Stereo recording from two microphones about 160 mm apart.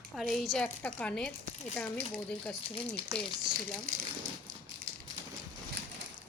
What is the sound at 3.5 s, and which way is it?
Crumpling, 5° right (ahead or behind).